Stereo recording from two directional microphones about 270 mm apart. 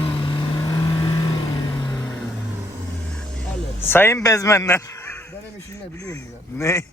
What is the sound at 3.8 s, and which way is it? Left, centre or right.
Speech, centre.